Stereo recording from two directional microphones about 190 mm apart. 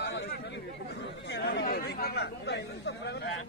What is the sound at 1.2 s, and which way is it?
Speech, 60° left (ahead or behind).